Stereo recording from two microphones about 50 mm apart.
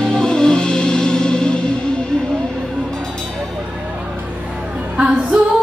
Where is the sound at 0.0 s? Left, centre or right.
Centre.